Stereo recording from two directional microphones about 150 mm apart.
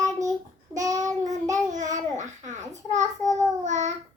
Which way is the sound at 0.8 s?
25° right (ahead or behind).